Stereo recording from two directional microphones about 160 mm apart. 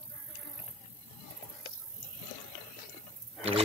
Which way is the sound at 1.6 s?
70° left (ahead or behind).